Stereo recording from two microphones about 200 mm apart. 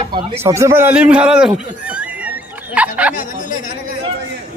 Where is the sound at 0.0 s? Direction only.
25° right (ahead or behind).